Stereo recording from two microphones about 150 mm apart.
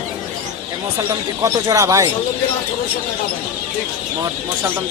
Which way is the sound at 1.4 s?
25° right (ahead or behind).